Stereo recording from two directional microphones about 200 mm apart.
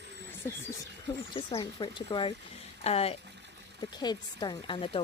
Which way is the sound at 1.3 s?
25° left (ahead or behind).